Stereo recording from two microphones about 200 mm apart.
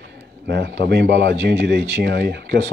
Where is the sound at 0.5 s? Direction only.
60° right (ahead or behind).